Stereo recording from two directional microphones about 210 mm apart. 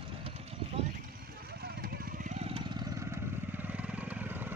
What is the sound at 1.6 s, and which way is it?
Vehicle, 45° right (ahead or behind).